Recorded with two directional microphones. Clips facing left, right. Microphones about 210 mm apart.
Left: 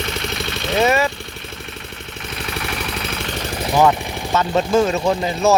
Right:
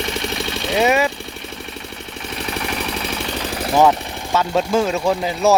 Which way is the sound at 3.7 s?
Centre (ahead or behind).